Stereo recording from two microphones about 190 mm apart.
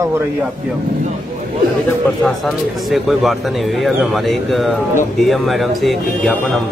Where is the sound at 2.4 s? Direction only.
Centre (ahead or behind).